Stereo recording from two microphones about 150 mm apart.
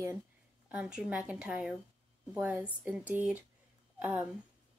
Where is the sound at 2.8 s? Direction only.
10° right (ahead or behind).